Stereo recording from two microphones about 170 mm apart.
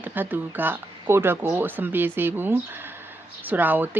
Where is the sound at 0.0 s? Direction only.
10° right (ahead or behind).